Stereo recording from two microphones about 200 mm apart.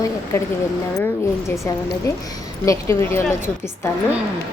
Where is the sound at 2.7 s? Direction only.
15° left (ahead or behind).